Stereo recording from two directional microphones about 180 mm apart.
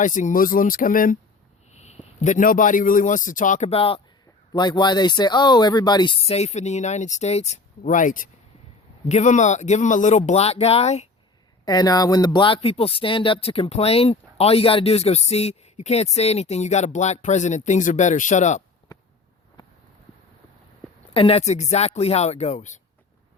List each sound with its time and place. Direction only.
0.0 s speech: 45° left (ahead or behind)
1.7 s a sound: 40° left (ahead or behind)
2.2 s speech: 45° left (ahead or behind)
11.6 s speech: 20° left (ahead or behind); by 18.6 s 40° left (ahead or behind)
21.1 s speech: 30° left (ahead or behind)